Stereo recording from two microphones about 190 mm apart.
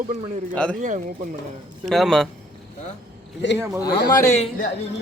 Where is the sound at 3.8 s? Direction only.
20° left (ahead or behind).